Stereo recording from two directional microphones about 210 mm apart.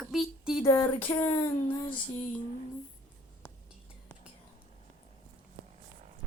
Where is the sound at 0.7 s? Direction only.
10° left (ahead or behind).